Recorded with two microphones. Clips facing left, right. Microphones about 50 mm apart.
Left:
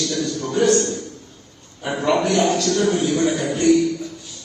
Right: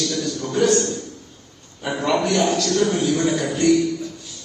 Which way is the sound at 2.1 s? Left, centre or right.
Left.